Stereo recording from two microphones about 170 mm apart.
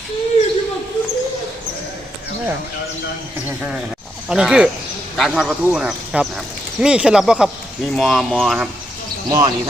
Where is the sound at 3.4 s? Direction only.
10° right (ahead or behind).